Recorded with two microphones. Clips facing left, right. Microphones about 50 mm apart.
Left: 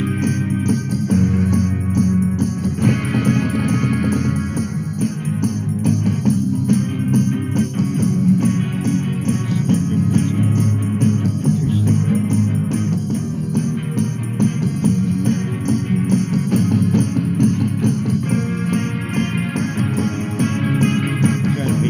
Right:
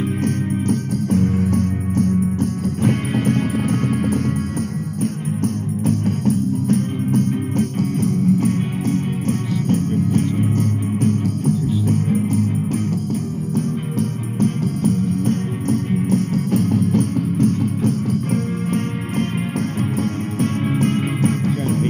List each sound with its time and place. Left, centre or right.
0.2 s music: left